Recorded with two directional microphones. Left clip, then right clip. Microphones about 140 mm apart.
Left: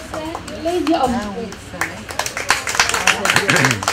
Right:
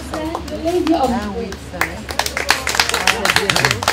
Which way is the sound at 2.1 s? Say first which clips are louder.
Right 1 dB; 30° left (ahead or behind).